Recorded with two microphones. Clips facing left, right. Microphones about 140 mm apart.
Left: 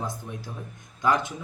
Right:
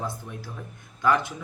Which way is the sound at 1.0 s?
20° left (ahead or behind).